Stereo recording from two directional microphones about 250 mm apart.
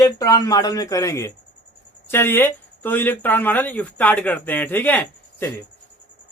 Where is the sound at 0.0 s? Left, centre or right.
Centre.